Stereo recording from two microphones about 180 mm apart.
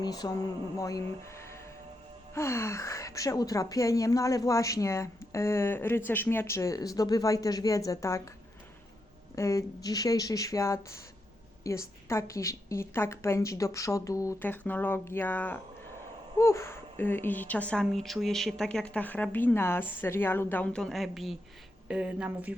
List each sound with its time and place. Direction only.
0.0 s a woman's voice: 20° left (ahead or behind)
9.3 s a woman's voice: 15° left (ahead or behind); by 22.5 s 10° right (ahead or behind)